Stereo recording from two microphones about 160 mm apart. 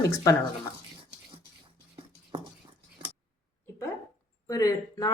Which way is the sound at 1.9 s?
35° right (ahead or behind).